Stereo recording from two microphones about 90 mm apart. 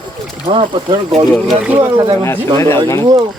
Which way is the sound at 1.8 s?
45° right (ahead or behind).